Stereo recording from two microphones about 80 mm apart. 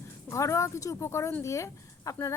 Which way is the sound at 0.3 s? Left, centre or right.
Left.